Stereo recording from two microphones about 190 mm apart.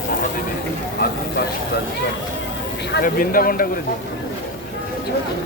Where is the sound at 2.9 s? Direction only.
50° left (ahead or behind).